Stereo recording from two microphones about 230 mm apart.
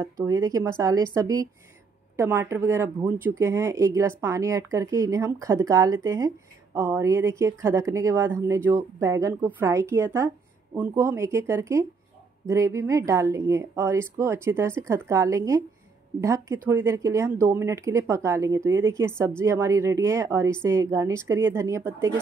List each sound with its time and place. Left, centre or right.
0.0 s speech: centre